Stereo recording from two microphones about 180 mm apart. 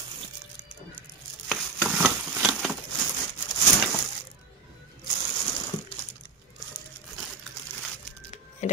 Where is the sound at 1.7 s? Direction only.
5° right (ahead or behind).